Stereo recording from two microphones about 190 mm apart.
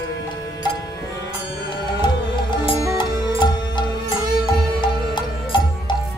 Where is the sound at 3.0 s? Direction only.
25° left (ahead or behind).